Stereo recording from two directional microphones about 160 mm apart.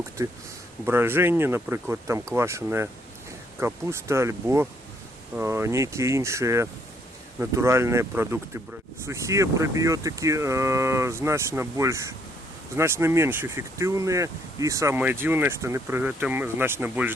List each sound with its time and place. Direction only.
0.2 s speech: 15° right (ahead or behind)